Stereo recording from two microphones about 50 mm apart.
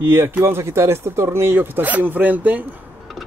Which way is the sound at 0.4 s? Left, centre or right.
Right.